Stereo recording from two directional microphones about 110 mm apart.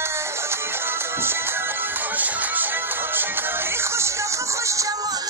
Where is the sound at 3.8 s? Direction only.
25° right (ahead or behind).